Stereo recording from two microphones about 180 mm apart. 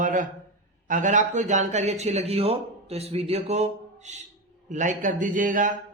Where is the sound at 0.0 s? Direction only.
45° right (ahead or behind).